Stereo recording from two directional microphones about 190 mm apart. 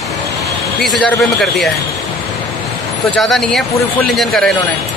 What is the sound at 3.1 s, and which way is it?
A man's voice, centre (ahead or behind).